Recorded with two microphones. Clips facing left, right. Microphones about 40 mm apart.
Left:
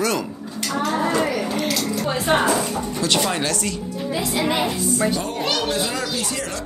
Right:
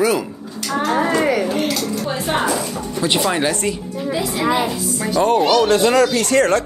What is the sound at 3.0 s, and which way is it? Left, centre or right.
Speech, centre.